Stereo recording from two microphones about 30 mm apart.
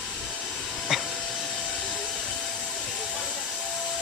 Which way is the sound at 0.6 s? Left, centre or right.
Centre.